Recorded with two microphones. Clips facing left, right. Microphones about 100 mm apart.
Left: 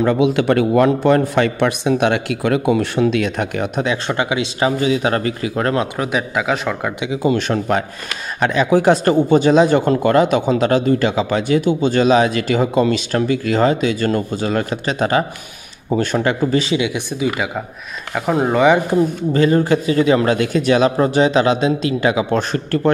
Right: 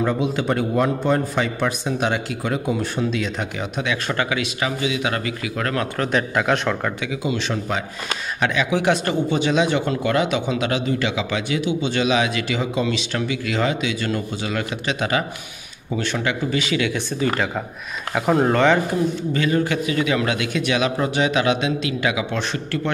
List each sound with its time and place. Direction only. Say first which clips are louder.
0.0 s a man's voice: left 6 dB; 70° left (ahead or behind); by 3.8 s 55° left (ahead or behind)
3.8 s speech: left 4 dB; 30° left (ahead or behind)
4.2 s speech: left 3 dB; 20° left (ahead or behind)
4.6 s speech: left 10 dB; 35° left (ahead or behind)
5.9 s speech: left 1 dB; 5° left (ahead or behind)
7.2 s speech: left 8 dB; 50° left (ahead or behind)
8.4 s speech: left 6 dB; 40° left (ahead or behind)
16.7 s speech: left 3 dB; 15° left (ahead or behind)
19.3 s speech: left 8 dB; 35° left (ahead or behind)